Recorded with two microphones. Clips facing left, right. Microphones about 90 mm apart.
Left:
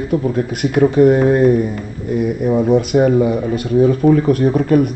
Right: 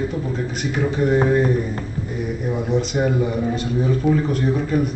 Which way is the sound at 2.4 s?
50° left (ahead or behind).